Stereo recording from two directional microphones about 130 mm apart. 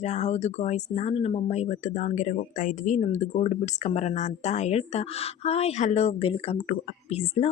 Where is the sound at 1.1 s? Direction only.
50° left (ahead or behind).